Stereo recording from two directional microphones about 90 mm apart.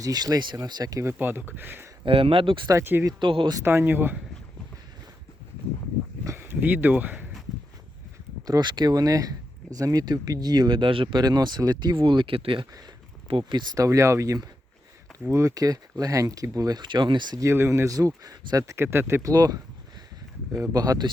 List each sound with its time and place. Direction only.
0.0 s speech: 45° right (ahead or behind)
1.0 s speech: 25° right (ahead or behind)
2.0 s speech: 90° right
3.2 s speech: 65° right (ahead or behind)
3.6 s speech: 25° right (ahead or behind)
6.2 s a sound: 25° right (ahead or behind)
8.4 s speech: 50° right (ahead or behind); by 11.2 s 70° right (ahead or behind)
11.2 s speech: 50° right (ahead or behind); by 12.6 s 80° right
13.2 s speech: 65° right (ahead or behind)
13.7 s speech: 35° right (ahead or behind); by 17.3 s 60° right (ahead or behind)
17.5 s speech: 30° right (ahead or behind)
19.2 s speech: 45° right (ahead or behind)